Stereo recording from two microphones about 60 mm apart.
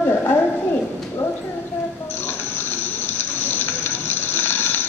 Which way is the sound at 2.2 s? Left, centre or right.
Left.